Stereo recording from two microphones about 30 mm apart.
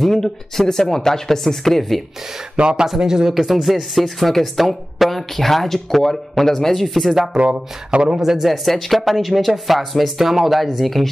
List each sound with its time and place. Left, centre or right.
0.0 s speech: centre
2.6 s speech: right
3.0 s speech: right
3.6 s speech: centre
7.9 s speech: right
8.4 s speech: centre